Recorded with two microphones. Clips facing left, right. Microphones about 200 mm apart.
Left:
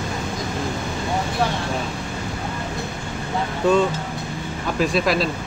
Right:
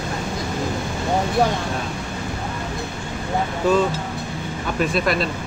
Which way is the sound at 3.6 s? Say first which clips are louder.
Left 1 dB; centre (ahead or behind).